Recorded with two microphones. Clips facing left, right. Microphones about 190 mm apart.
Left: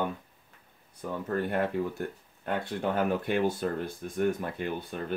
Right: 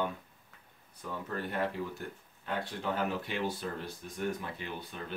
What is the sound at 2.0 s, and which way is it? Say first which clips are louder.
Speech: left 7 dB; 50° left (ahead or behind).